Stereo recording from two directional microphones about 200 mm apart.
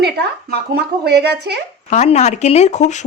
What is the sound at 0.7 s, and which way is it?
Speech, 55° right (ahead or behind).